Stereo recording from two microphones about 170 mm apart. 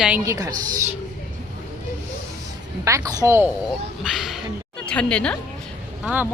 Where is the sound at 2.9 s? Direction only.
20° right (ahead or behind).